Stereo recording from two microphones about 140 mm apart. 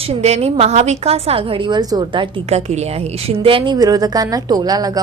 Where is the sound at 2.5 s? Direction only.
50° right (ahead or behind).